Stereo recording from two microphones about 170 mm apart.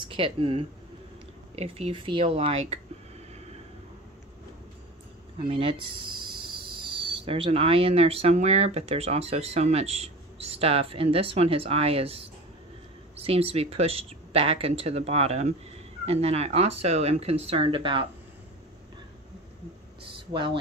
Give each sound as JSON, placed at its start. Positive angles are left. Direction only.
{"t": 0.0, "sound": "speech", "side_deg": -30}
{"t": 5.4, "sound": "speech", "side_deg": -30}